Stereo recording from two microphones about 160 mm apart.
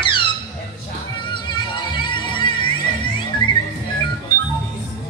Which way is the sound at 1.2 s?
30° left (ahead or behind).